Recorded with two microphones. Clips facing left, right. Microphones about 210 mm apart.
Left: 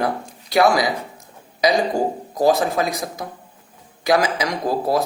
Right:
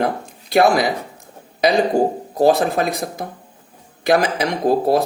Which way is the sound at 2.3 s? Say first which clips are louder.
Right 2 dB; 60° right (ahead or behind).